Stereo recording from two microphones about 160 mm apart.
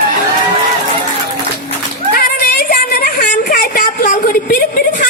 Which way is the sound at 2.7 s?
65° left (ahead or behind).